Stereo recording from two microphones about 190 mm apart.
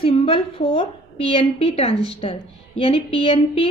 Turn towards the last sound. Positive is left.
turn(degrees=30)  # may be behind; listen again after turning